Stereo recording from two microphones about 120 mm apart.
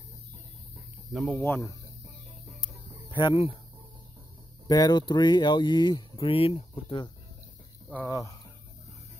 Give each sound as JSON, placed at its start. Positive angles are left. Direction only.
{"t": 0.7, "sound": "a sound", "side_deg": 0}
{"t": 1.4, "sound": "speech", "side_deg": 25}
{"t": 3.1, "sound": "speech", "side_deg": 40}
{"t": 4.6, "sound": "speech", "side_deg": 30}
{"t": 6.1, "sound": "speech", "side_deg": 50}
{"t": 8.1, "sound": "speech", "side_deg": 30}